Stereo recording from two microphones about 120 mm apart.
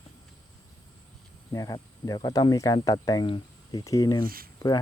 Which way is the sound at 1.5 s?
30° left (ahead or behind).